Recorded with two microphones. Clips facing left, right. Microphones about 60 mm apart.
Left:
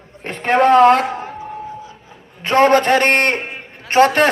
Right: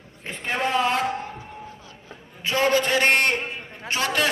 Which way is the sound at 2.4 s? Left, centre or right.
Left.